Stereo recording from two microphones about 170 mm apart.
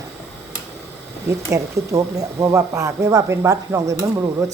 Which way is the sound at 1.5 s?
20° right (ahead or behind).